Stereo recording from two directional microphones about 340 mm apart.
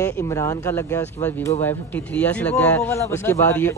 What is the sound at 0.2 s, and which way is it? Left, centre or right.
A man's voice, centre.